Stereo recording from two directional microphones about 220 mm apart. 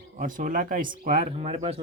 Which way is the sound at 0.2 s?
40° right (ahead or behind).